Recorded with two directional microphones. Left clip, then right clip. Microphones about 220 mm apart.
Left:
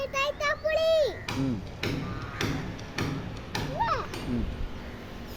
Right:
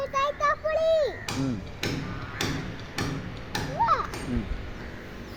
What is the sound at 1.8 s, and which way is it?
Music, 45° right (ahead or behind).